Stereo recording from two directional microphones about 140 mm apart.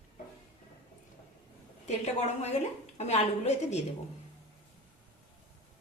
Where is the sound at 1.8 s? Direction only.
50° left (ahead or behind).